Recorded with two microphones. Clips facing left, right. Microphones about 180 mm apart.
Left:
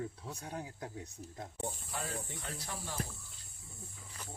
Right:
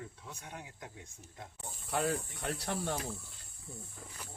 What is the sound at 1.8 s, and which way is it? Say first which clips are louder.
Speech: right 8 dB; 70° right (ahead or behind).